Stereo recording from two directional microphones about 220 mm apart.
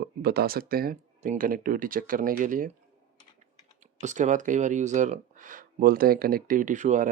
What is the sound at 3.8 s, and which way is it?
Speech, 35° right (ahead or behind).